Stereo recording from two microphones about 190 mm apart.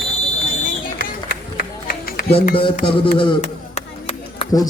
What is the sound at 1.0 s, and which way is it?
Run, 50° left (ahead or behind).